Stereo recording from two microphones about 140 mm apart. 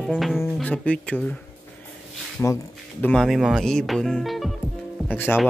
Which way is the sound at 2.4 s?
15° left (ahead or behind).